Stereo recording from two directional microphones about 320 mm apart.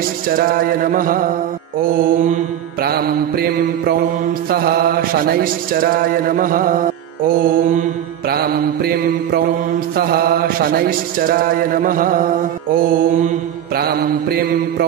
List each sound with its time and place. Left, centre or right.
0.4 s mantra: right